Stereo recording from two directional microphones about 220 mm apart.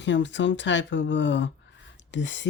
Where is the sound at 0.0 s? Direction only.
55° left (ahead or behind).